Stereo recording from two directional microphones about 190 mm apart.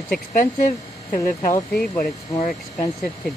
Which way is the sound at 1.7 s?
5° left (ahead or behind).